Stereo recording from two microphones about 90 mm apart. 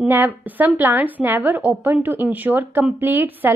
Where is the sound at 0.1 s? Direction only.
20° right (ahead or behind).